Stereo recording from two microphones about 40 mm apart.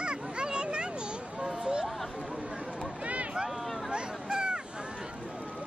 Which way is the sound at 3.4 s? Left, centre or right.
Centre.